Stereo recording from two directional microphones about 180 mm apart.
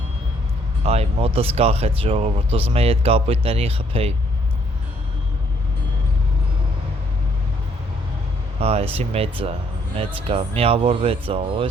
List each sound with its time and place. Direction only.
0.9 s speech: 35° right (ahead or behind)
8.5 s speech: 35° right (ahead or behind)